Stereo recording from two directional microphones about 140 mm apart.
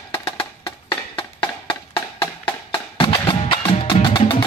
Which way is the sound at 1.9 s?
35° left (ahead or behind).